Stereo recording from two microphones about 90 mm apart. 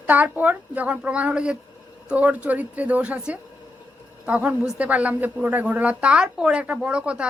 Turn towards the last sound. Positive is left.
turn(degrees=-10)  # may be behind; listen again after turning